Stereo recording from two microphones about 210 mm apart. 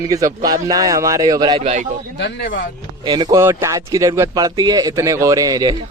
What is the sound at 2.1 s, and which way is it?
Speech, 55° left (ahead or behind).